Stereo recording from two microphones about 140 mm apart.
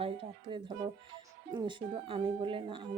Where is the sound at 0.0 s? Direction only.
40° right (ahead or behind).